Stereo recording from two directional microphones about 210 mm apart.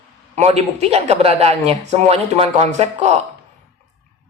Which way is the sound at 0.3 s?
30° right (ahead or behind).